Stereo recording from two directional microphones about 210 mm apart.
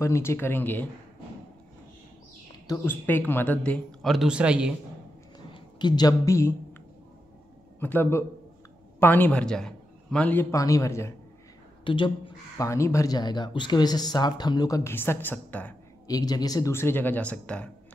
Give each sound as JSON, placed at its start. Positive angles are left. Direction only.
{"t": 0.0, "sound": "a man's voice", "side_deg": 15}
{"t": 2.6, "sound": "a man's voice", "side_deg": 15}
{"t": 5.5, "sound": "speech", "side_deg": 20}
{"t": 7.8, "sound": "a man's voice", "side_deg": 10}
{"t": 11.8, "sound": "a man's voice", "side_deg": 25}